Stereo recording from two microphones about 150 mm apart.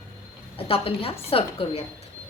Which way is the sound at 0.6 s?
40° left (ahead or behind).